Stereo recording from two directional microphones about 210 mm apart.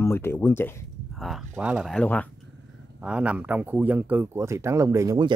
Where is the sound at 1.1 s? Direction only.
Centre (ahead or behind).